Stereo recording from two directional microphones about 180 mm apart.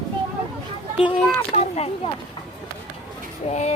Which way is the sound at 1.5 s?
35° left (ahead or behind).